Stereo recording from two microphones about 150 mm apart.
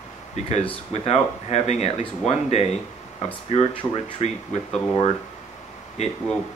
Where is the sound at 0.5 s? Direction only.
45° left (ahead or behind).